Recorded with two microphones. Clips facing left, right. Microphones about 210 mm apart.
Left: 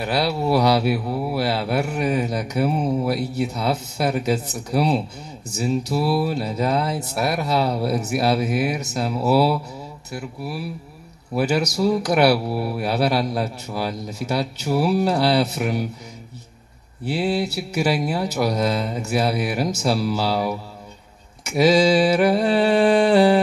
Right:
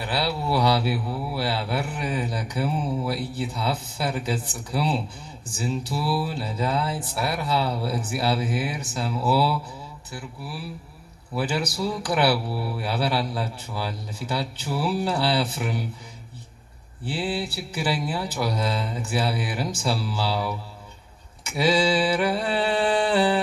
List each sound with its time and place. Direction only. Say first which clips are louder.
0.0 s speech: left 5 dB; 40° left (ahead or behind)
10.1 s mantra: left 7 dB; 40° left (ahead or behind)
11.3 s speech: left 6 dB; 40° left (ahead or behind)
17.0 s speech: left 6 dB; 40° left (ahead or behind)
21.5 s mantra: left 6 dB; 40° left (ahead or behind)